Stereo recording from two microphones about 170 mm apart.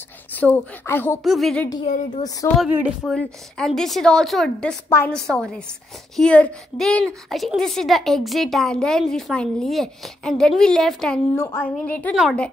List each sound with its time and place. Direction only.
0.4 s a woman's voice: 10° left (ahead or behind)
1.2 s a woman's voice: centre (ahead or behind)
2.4 s a woman's voice: 20° left (ahead or behind)
3.0 s a woman's voice: 5° left (ahead or behind)
11.3 s a woman's voice: 15° left (ahead or behind)